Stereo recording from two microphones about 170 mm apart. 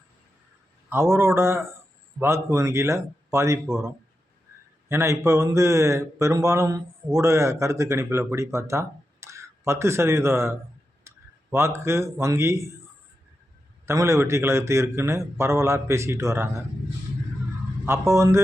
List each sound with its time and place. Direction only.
0.9 s speech: 15° right (ahead or behind)
11.1 s a sound: 15° right (ahead or behind)
11.5 s speech: 15° right (ahead or behind)
13.8 s speech: 15° right (ahead or behind)
17.8 s speech: 15° right (ahead or behind)